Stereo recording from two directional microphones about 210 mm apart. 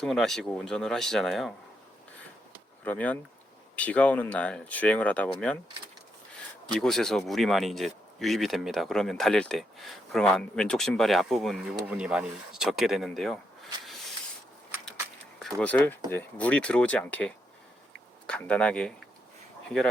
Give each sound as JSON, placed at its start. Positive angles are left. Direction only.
{"t": 0.0, "sound": "speech", "side_deg": 0}
{"t": 2.8, "sound": "speech", "side_deg": 5}
{"t": 6.7, "sound": "speech", "side_deg": 0}
{"t": 15.4, "sound": "speech", "side_deg": 5}